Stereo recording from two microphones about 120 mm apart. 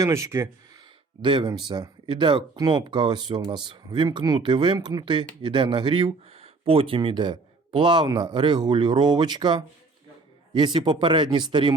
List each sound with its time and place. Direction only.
0.0 s speech: 25° right (ahead or behind)
1.2 s speech: 40° right (ahead or behind)